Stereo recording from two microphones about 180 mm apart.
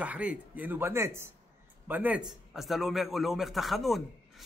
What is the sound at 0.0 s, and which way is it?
A man's voice, 10° right (ahead or behind).